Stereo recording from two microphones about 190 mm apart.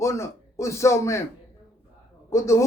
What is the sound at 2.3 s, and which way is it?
Speech, 15° left (ahead or behind).